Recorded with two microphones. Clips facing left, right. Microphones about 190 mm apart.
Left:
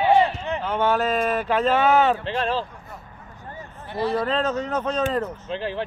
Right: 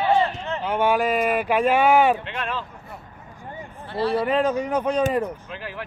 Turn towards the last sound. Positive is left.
turn(degrees=30)  # may be behind; listen again after turning